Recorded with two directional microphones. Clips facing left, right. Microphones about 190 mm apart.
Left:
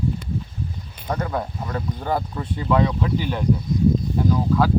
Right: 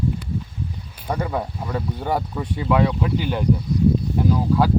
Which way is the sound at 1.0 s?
10° right (ahead or behind).